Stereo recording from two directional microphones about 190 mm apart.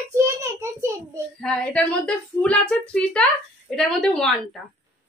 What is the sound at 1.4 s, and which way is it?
A woman's voice, 5° left (ahead or behind).